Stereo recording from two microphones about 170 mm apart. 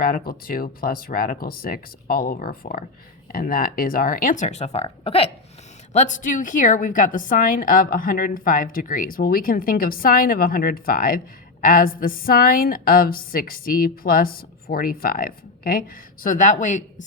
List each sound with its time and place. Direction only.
0.0 s a woman's voice: 60° left (ahead or behind); by 5.3 s 35° left (ahead or behind)
5.9 s a woman's voice: 45° left (ahead or behind)